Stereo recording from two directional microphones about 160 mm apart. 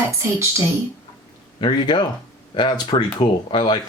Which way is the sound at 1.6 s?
30° left (ahead or behind).